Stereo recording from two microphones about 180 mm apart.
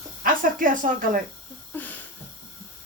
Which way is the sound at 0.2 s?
50° right (ahead or behind).